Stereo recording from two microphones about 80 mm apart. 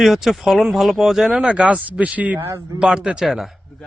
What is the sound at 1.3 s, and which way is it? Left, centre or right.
Speech, centre.